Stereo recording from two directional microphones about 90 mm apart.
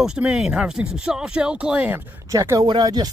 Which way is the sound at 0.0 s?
5° right (ahead or behind).